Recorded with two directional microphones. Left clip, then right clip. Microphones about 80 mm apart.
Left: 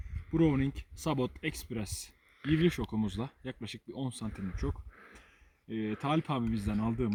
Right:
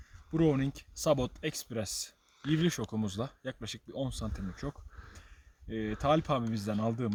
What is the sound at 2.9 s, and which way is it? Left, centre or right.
Speech, right.